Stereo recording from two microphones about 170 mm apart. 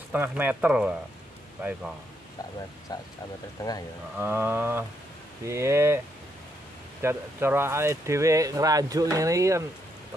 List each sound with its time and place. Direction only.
0.1 s speech: 10° right (ahead or behind)
2.9 s speech: 25° left (ahead or behind)
4.2 s speech: 10° right (ahead or behind)
7.0 s speech: 15° right (ahead or behind)